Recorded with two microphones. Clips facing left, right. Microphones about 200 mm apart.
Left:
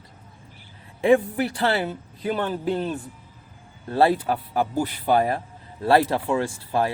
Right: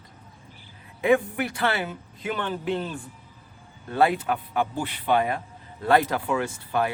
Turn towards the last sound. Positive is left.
turn(degrees=30)  # may be behind; listen again after turning